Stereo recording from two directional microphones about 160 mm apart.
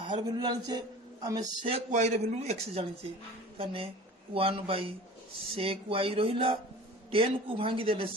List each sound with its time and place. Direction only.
0.1 s a man's voice: 25° right (ahead or behind)
1.7 s a man's voice: 45° right (ahead or behind)